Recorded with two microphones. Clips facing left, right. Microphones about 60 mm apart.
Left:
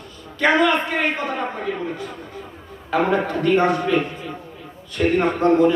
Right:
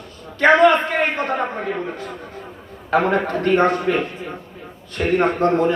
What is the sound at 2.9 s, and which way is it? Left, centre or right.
A man's voice, right.